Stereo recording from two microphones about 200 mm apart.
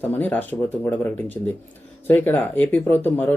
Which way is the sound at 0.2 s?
10° left (ahead or behind).